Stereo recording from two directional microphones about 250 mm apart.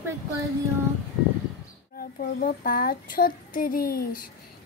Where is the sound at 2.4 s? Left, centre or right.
Left.